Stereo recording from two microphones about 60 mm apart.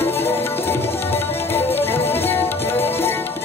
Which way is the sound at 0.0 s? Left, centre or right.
Left.